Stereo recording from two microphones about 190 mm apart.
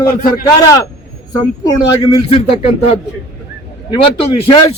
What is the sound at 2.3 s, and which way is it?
Speech, 30° left (ahead or behind).